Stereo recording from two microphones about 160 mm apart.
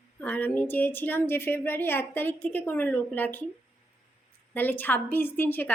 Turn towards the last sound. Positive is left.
turn(degrees=15)  # may be behind; listen again after turning